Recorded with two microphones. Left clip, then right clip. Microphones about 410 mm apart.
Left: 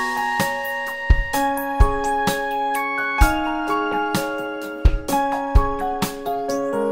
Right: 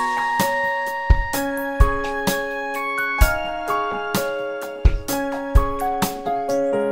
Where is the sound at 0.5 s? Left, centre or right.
Right.